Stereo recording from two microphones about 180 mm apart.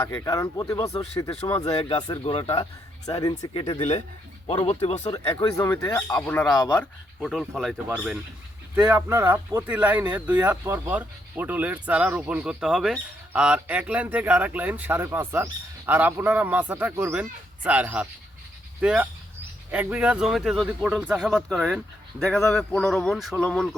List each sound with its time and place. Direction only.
0.0 s speech: 15° left (ahead or behind)
1.6 s speech: 30° left (ahead or behind)
5.5 s speech: 15° left (ahead or behind)
7.2 s speech: centre (ahead or behind)